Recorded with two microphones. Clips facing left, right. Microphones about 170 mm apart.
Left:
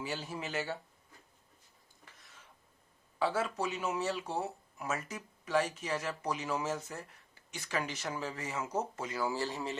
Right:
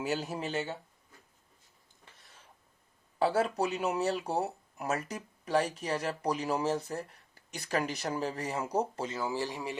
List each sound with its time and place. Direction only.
0.0 s speech: 45° right (ahead or behind)
0.5 s speech: 25° right (ahead or behind)
3.2 s speech: 40° right (ahead or behind); by 9.7 s 15° right (ahead or behind)